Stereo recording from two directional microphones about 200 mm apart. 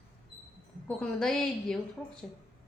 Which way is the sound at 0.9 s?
5° left (ahead or behind).